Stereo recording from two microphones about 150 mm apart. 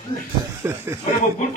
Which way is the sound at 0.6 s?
15° right (ahead or behind).